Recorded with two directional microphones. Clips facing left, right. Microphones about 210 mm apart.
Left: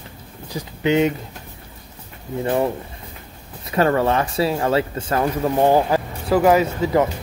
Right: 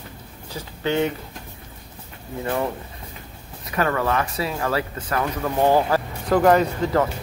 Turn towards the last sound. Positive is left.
turn(degrees=5)  # may be behind; listen again after turning